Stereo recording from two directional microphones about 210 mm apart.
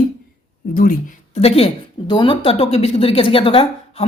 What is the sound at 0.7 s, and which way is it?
Speech, 40° left (ahead or behind).